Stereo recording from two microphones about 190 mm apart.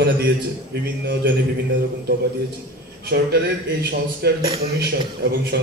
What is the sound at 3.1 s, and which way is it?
A man's voice, 55° right (ahead or behind).